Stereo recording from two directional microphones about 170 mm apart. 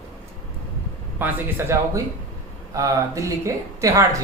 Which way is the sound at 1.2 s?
15° right (ahead or behind).